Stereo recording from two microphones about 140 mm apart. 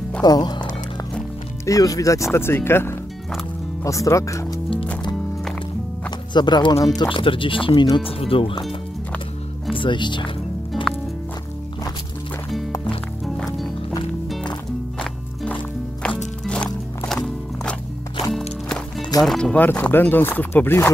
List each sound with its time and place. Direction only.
0.2 s speech: 30° left (ahead or behind)
1.7 s speech: 25° left (ahead or behind)
6.0 s speech: 30° left (ahead or behind)
9.7 s speech: 35° left (ahead or behind)
10.7 s music: 5° left (ahead or behind)
15.0 s music: 10° left (ahead or behind)
19.2 s speech: 5° left (ahead or behind)